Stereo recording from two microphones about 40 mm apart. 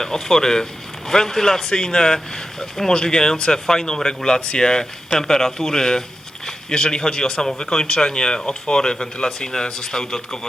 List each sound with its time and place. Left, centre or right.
0.0 s speech: centre